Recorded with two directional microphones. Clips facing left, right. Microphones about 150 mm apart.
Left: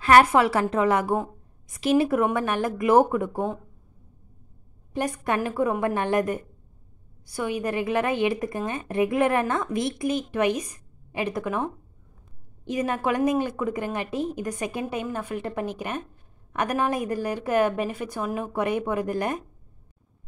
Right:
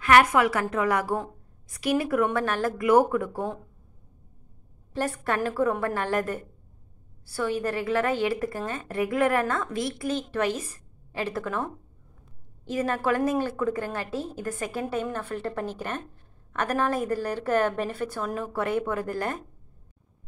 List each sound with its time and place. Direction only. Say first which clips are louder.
0.0 s a woman's voice: left 2 dB; 30° left (ahead or behind)
4.9 s a woman's voice: left 1 dB; 15° left (ahead or behind)